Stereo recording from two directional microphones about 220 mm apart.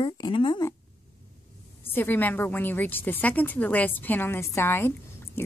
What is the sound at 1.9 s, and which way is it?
A woman's voice, 10° left (ahead or behind).